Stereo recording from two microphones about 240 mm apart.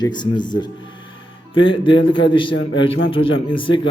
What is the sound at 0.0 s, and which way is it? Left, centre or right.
A man's voice, centre.